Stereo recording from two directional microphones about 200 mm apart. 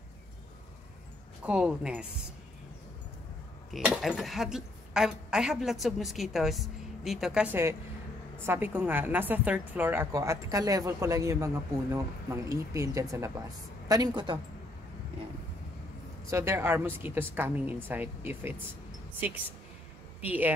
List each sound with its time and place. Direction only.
1.4 s a woman's voice: 5° right (ahead or behind)
3.7 s a woman's voice: centre (ahead or behind); by 14.4 s 20° right (ahead or behind)
16.3 s a woman's voice: 15° right (ahead or behind)
20.2 s a woman's voice: 10° right (ahead or behind)